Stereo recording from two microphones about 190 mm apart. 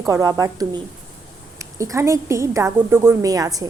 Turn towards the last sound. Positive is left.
turn(degrees=-20)  # may be behind; listen again after turning